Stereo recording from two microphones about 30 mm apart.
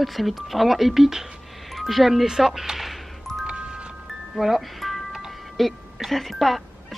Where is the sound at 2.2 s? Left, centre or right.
Centre.